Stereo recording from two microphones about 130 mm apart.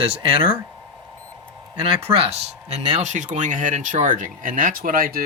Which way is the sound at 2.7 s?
65° right (ahead or behind).